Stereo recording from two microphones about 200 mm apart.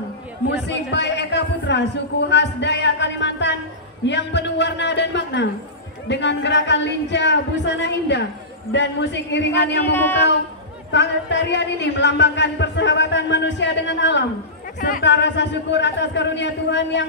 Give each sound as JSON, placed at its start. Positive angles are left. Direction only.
{"t": 0.7, "sound": "a man's voice", "side_deg": 60}
{"t": 9.9, "sound": "speech", "side_deg": 10}
{"t": 10.9, "sound": "a man's voice", "side_deg": 60}
{"t": 14.8, "sound": "speech", "side_deg": 45}
{"t": 15.0, "sound": "a man's voice", "side_deg": 60}